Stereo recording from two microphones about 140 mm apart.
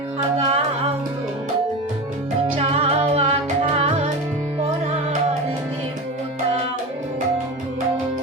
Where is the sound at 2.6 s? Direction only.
50° right (ahead or behind).